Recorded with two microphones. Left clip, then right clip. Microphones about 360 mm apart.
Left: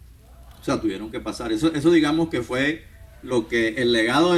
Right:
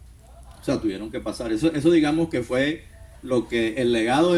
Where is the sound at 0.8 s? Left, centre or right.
Left.